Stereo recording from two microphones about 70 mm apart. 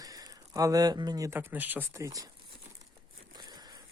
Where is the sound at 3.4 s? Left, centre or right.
Right.